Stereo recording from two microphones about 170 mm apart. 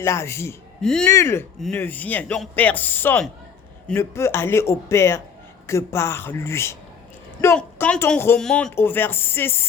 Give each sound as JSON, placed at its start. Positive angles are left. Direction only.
{"t": 0.0, "sound": "speech", "side_deg": 15}
{"t": 0.8, "sound": "speech", "side_deg": 5}
{"t": 1.1, "sound": "speech", "side_deg": 15}